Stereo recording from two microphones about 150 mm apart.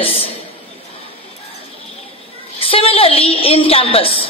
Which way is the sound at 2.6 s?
40° left (ahead or behind).